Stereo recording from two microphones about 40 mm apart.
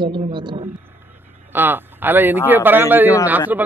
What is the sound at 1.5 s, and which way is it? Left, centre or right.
A man's voice, right.